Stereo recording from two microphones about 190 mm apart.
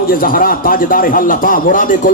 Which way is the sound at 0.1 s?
50° left (ahead or behind).